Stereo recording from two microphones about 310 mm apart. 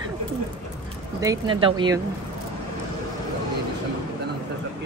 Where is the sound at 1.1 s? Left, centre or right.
Centre.